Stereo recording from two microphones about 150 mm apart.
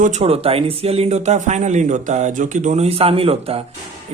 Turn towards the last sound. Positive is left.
turn(degrees=-40)  # may be behind; listen again after turning